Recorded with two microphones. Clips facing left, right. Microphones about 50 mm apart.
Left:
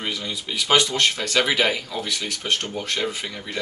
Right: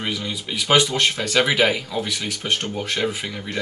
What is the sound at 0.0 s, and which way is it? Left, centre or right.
Speech, centre.